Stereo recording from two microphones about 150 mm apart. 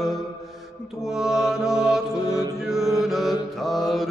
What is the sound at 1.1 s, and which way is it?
Music, 5° right (ahead or behind).